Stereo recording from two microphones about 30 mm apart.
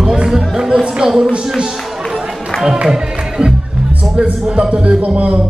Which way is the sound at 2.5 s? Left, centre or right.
Left.